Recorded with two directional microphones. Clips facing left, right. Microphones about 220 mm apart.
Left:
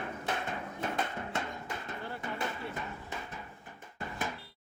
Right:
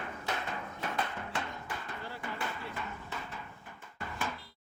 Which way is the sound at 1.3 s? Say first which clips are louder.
Left 1 dB; 25° left (ahead or behind).